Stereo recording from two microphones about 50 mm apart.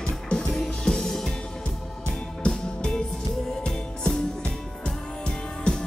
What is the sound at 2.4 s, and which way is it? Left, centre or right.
Music, centre.